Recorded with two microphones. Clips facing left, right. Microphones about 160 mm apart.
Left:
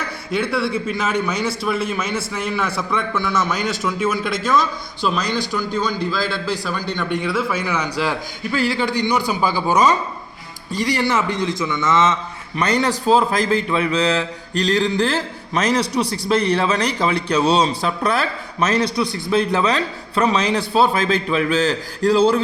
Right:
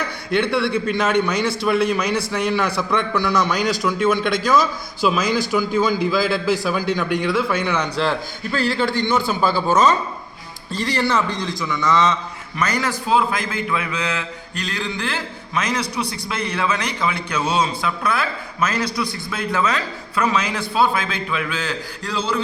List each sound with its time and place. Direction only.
0.3 s a man's voice: 5° left (ahead or behind); by 22.4 s 45° left (ahead or behind)